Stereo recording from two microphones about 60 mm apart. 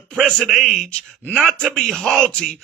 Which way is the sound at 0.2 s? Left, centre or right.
Centre.